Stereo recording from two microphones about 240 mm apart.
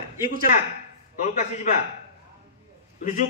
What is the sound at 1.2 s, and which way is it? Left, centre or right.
Speech, left.